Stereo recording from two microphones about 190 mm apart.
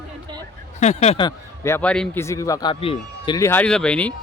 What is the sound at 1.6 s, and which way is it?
Speech, 10° left (ahead or behind).